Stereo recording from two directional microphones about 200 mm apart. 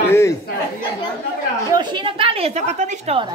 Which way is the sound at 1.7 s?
20° right (ahead or behind).